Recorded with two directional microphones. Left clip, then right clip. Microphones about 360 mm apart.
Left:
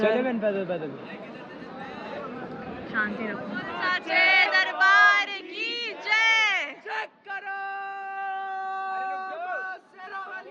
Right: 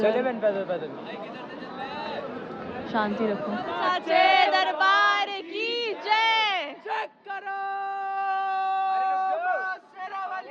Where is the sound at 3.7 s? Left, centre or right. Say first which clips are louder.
Right 2 dB; centre.